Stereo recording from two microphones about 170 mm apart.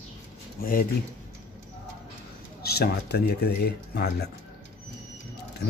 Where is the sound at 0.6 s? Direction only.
55° left (ahead or behind).